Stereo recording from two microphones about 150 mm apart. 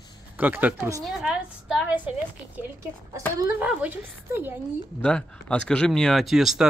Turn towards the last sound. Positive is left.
turn(degrees=0)  # may be behind; listen again after turning